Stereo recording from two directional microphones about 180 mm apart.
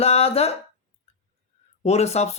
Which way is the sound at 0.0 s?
35° left (ahead or behind).